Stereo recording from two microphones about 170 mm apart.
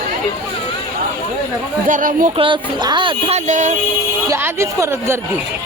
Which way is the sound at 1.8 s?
50° right (ahead or behind).